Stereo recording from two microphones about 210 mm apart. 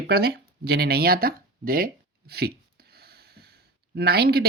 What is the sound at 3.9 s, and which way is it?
Speech, 50° right (ahead or behind).